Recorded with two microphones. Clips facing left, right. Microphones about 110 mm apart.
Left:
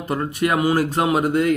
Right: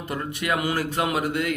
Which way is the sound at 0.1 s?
35° left (ahead or behind).